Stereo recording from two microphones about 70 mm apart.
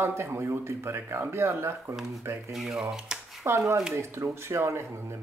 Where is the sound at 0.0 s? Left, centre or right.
Right.